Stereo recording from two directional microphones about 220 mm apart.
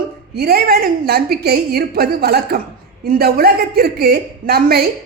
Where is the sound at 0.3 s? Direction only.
45° right (ahead or behind).